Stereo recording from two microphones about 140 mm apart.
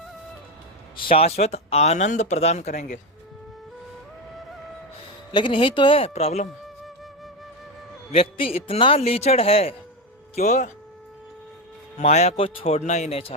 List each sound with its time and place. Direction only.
1.0 s speech: 45° left (ahead or behind)
5.3 s speech: 35° left (ahead or behind)
8.1 s speech: 45° left (ahead or behind)
10.3 s speech: 55° left (ahead or behind)
11.9 s speech: 50° left (ahead or behind)
12.8 s speech: 55° left (ahead or behind)